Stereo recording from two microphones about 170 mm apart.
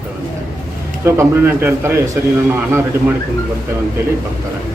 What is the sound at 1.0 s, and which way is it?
A man's voice, 15° right (ahead or behind).